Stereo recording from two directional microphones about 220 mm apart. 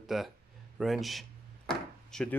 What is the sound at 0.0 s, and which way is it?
Speech, centre (ahead or behind).